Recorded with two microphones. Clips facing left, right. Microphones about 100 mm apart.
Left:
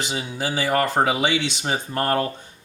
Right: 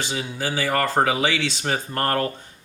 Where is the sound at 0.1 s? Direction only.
15° left (ahead or behind).